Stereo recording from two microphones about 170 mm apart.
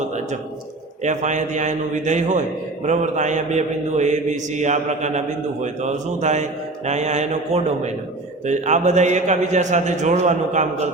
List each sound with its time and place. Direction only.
1.0 s a man's voice: 45° right (ahead or behind)